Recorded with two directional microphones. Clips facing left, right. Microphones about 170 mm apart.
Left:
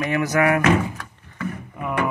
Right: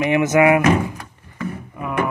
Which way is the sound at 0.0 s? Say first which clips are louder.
Right 5 dB; 20° right (ahead or behind).